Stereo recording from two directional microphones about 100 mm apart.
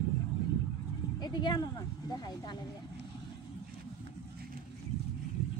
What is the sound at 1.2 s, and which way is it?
Speech, 45° left (ahead or behind).